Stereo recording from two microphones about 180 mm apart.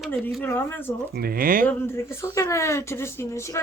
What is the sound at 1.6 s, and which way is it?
Speech, 15° left (ahead or behind).